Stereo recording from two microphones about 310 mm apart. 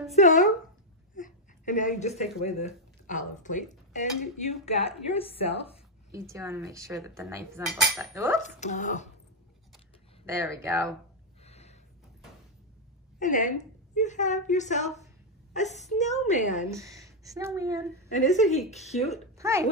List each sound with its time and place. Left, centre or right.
0.1 s a woman's voice: left
6.3 s cutlery: centre
8.4 s a woman's voice: left
10.2 s cutlery: centre
11.4 s a sound: left
13.2 s a woman's voice: left
16.7 s speech: centre
18.1 s a woman's voice: left
19.3 s a sound: centre